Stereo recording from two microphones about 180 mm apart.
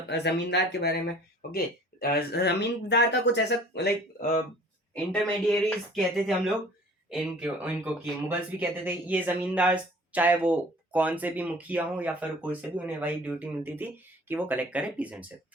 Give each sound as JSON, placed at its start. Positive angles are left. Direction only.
{"t": 0.1, "sound": "speech", "side_deg": 70}
{"t": 5.1, "sound": "speech", "side_deg": 5}